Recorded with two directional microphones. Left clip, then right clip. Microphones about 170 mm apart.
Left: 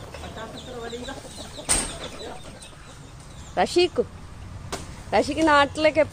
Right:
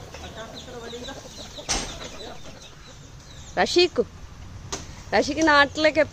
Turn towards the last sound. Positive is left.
turn(degrees=-15)  # may be behind; listen again after turning